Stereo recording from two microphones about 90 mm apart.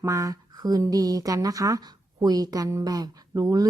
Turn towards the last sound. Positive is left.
turn(degrees=-45)  # may be behind; listen again after turning